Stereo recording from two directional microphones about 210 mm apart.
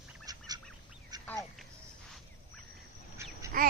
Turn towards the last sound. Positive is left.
turn(degrees=-40)  # may be behind; listen again after turning